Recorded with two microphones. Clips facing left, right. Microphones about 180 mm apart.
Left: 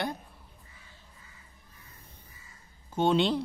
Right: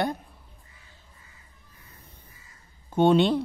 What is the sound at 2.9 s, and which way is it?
Speech, 60° right (ahead or behind).